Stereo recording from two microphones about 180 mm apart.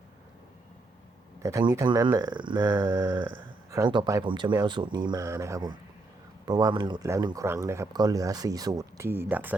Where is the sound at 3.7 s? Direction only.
25° right (ahead or behind).